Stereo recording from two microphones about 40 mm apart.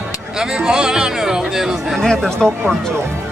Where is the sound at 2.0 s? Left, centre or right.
Centre.